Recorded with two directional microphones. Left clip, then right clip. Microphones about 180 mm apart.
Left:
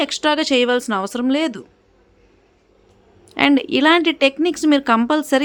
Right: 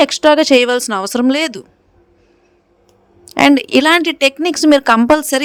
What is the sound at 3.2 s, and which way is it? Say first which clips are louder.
A woman's voice: right 5 dB; 50° right (ahead or behind).